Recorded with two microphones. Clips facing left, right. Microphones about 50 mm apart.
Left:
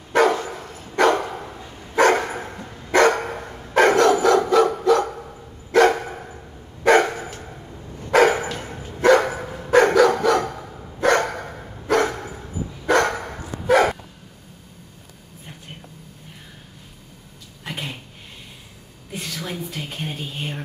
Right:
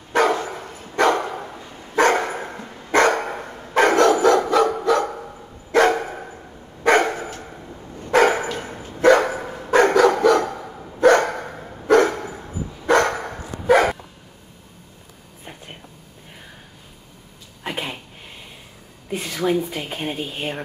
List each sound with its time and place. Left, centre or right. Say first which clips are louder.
0.1 s dog: left 1 dB; centre
17.6 s speech: right 3 dB; centre
19.1 s speech: right 9 dB; centre
20.2 s speech: right 3 dB; centre